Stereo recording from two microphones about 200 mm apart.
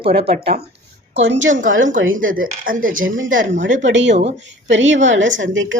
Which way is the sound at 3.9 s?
65° right (ahead or behind).